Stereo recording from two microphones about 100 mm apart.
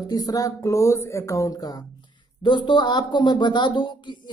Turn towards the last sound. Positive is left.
turn(degrees=50)  # may be behind; listen again after turning